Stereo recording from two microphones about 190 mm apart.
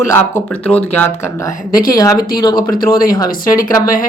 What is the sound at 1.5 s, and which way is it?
Speech, 50° left (ahead or behind).